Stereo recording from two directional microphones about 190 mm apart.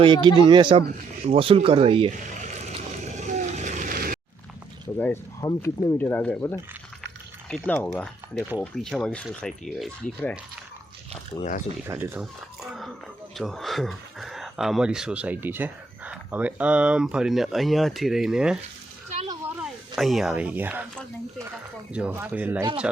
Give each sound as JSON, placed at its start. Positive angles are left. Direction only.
{"t": 0.0, "sound": "speech", "side_deg": -25}
{"t": 2.2, "sound": "vehicle", "side_deg": -40}
{"t": 4.9, "sound": "speech", "side_deg": 10}
{"t": 11.3, "sound": "speech", "side_deg": 40}
{"t": 11.9, "sound": "speech", "side_deg": -15}
{"t": 12.2, "sound": "a sound", "side_deg": 0}
{"t": 13.3, "sound": "speech", "side_deg": 0}
{"t": 21.9, "sound": "speech", "side_deg": -10}